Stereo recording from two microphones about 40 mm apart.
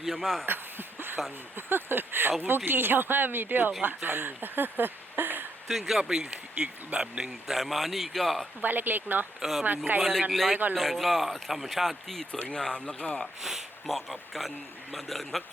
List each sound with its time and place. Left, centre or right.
0.1 s a man's voice: centre
0.4 s a sound: right
1.5 s speech: right
5.6 s speech: centre
6.0 s speech: right
7.4 s speech: centre
8.6 s speech: right
9.4 s speech: centre
9.7 s speech: right
10.0 s a man's voice: centre
12.3 s speech: left
13.8 s speech: centre